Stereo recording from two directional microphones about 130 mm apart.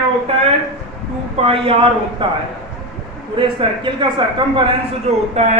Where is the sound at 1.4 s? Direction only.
45° right (ahead or behind).